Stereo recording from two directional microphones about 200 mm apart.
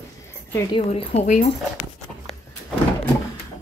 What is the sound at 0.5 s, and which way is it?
Speech, 25° left (ahead or behind).